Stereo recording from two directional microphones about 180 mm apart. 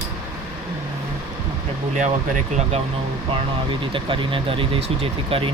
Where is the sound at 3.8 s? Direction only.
30° right (ahead or behind).